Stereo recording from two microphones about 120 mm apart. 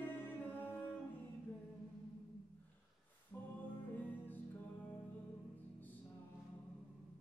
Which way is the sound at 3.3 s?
20° left (ahead or behind).